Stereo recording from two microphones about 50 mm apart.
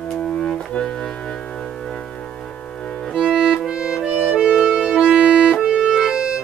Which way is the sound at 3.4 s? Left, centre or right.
Centre.